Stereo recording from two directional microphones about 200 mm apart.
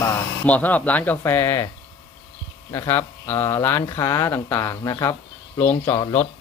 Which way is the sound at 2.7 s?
10° left (ahead or behind).